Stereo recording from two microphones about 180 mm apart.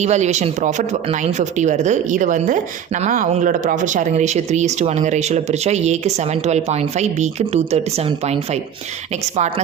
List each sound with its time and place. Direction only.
0.0 s speech: 40° right (ahead or behind)